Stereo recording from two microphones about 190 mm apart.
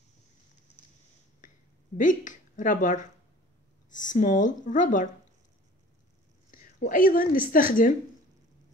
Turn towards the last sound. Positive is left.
turn(degrees=45)  # may be behind; listen again after turning